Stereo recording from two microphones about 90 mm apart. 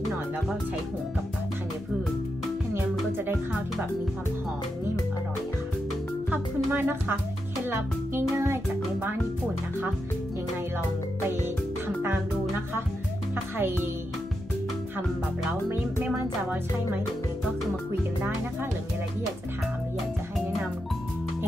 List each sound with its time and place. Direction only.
2.7 s music: 25° right (ahead or behind)
6.3 s music: 25° right (ahead or behind)
12.0 s music: 25° right (ahead or behind)
16.2 s music: 20° right (ahead or behind)